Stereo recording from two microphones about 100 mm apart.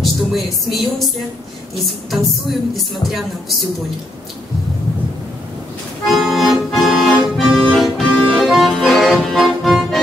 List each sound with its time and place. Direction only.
0.0 s music: centre (ahead or behind)
2.7 s speech: centre (ahead or behind)
6.0 s accordion: centre (ahead or behind)